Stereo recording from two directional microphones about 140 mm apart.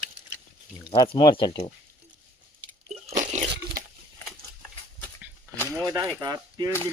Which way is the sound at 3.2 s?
70° right (ahead or behind).